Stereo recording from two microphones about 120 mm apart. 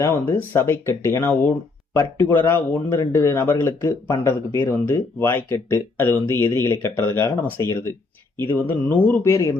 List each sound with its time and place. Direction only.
0.0 s speech: 20° left (ahead or behind)
8.4 s speech: 15° left (ahead or behind)